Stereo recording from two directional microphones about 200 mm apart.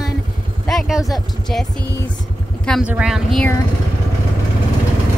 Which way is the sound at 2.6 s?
Centre (ahead or behind).